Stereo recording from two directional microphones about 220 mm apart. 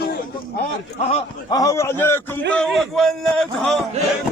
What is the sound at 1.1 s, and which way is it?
A man's voice, 20° left (ahead or behind).